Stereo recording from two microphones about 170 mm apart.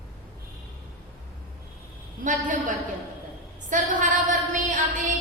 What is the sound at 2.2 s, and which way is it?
Speech, 50° right (ahead or behind).